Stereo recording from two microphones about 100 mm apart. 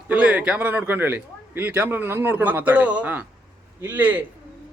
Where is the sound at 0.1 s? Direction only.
15° right (ahead or behind).